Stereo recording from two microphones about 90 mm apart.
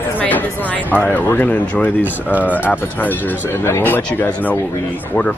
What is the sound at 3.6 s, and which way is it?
Speech, 25° left (ahead or behind).